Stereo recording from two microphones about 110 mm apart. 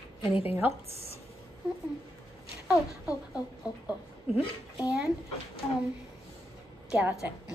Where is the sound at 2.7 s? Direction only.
10° right (ahead or behind).